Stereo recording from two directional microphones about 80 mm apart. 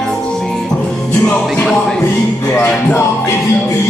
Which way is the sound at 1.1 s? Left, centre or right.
Centre.